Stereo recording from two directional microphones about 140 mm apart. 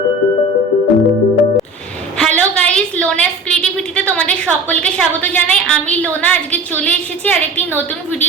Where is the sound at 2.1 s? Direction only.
5° left (ahead or behind).